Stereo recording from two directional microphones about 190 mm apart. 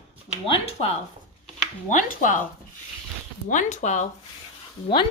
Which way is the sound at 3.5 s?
40° left (ahead or behind).